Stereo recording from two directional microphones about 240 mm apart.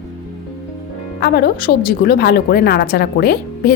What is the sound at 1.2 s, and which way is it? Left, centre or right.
A woman's voice, left.